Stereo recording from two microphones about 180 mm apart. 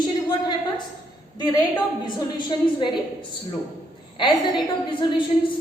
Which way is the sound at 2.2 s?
25° left (ahead or behind).